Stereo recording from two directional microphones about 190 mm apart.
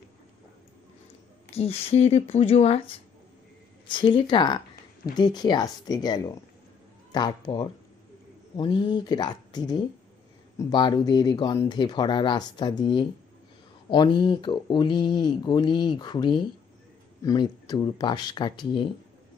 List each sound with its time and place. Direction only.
1.5 s speech: 30° left (ahead or behind)
3.9 s speech: 25° left (ahead or behind)